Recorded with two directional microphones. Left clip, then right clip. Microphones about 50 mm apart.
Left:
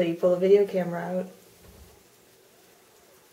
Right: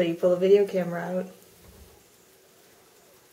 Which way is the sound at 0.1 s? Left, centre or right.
Right.